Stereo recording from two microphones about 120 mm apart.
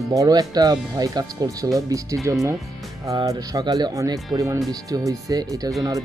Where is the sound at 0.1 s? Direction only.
30° right (ahead or behind).